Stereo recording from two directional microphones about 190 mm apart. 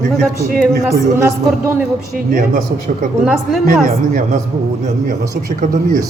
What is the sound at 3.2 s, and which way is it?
Speech, 5° right (ahead or behind).